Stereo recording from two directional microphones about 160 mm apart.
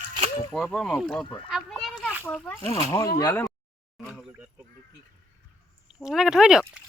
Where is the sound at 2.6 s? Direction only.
35° left (ahead or behind).